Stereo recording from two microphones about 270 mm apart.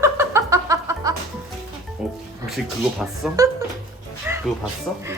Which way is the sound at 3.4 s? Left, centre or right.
Centre.